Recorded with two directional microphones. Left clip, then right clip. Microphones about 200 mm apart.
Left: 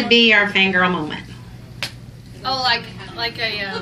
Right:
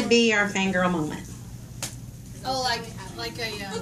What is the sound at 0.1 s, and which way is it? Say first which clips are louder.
A woman's voice: left 8 dB; 40° left (ahead or behind).